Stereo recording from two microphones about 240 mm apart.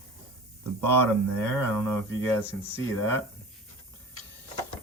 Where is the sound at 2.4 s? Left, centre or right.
Centre.